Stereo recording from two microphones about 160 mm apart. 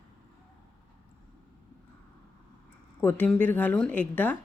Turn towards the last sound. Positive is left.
turn(degrees=10)  # may be behind; listen again after turning